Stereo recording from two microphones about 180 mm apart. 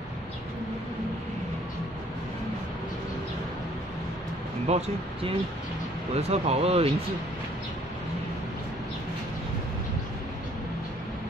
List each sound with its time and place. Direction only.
4.6 s speech: 35° right (ahead or behind)